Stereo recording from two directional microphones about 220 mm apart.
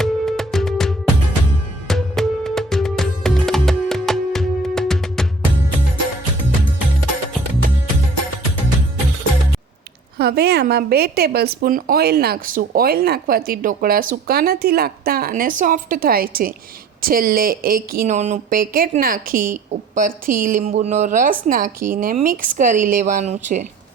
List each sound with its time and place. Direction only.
0.0 s music: centre (ahead or behind)
10.2 s speech: 45° right (ahead or behind)